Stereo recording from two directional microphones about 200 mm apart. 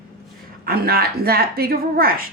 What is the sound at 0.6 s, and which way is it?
A woman's voice, 50° right (ahead or behind).